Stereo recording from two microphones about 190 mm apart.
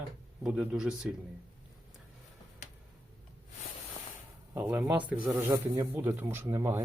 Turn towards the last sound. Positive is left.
turn(degrees=-15)  # may be behind; listen again after turning